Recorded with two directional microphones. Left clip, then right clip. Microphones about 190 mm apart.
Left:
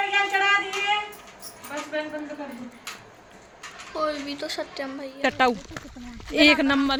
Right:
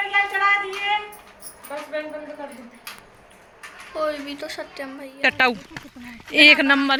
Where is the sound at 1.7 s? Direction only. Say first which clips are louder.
Right 1 dB; 15° right (ahead or behind).